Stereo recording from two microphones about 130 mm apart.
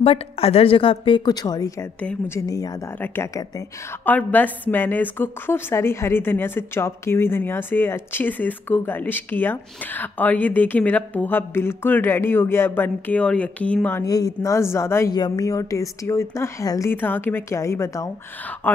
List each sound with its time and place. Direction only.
0.0 s a woman's voice: 50° left (ahead or behind); by 1.9 s 30° left (ahead or behind)
2.0 s a woman's voice: 15° left (ahead or behind)
2.4 s speech: 30° left (ahead or behind)
4.0 s a woman's voice: 15° left (ahead or behind)
14.0 s speech: 25° left (ahead or behind)
15.1 s speech: 30° left (ahead or behind)